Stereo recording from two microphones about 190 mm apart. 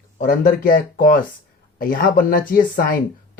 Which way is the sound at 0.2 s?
45° left (ahead or behind).